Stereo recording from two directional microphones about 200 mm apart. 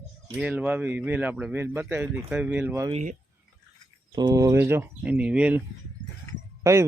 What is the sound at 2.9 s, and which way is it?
Speech, 40° right (ahead or behind).